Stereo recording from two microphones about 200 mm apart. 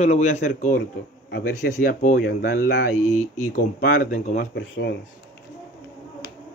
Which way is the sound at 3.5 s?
45° left (ahead or behind).